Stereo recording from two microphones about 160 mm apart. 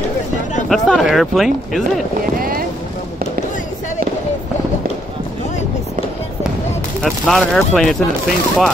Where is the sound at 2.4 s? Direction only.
65° right (ahead or behind).